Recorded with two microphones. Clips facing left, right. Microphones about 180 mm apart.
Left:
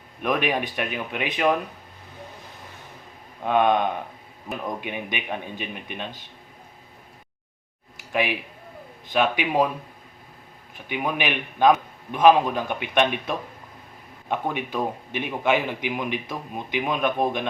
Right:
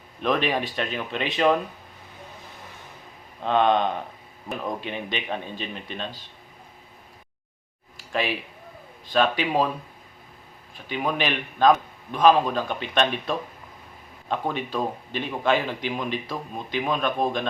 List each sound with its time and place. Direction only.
0.2 s a man's voice: 10° left (ahead or behind)
3.4 s a man's voice: 10° left (ahead or behind)
8.1 s a man's voice: 15° left (ahead or behind)
10.8 s a man's voice: 15° left (ahead or behind)